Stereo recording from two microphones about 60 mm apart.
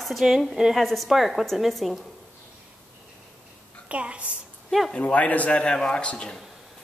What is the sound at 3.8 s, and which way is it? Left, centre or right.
Speech, right.